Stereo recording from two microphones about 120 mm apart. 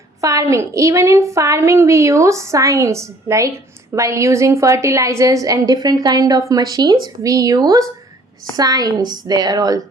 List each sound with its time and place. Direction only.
0.2 s a woman's voice: 25° right (ahead or behind)